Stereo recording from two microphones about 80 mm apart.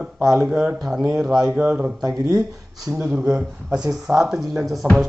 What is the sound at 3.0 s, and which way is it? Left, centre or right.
Speech, centre.